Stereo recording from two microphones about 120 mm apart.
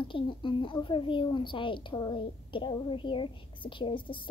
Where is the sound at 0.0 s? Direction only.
45° left (ahead or behind).